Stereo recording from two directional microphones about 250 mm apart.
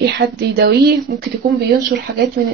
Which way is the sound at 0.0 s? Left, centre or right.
Right.